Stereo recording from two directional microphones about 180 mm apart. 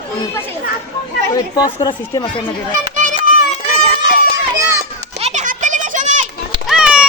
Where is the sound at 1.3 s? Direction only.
20° left (ahead or behind).